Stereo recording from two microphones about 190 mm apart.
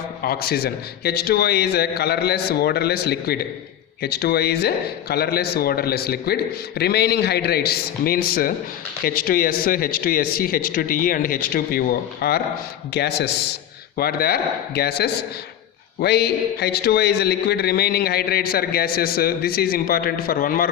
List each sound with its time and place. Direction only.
0.2 s a man's voice: 55° left (ahead or behind)